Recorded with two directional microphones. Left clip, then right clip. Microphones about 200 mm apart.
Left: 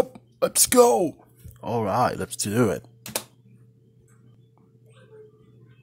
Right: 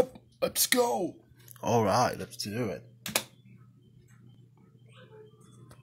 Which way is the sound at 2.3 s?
35° left (ahead or behind).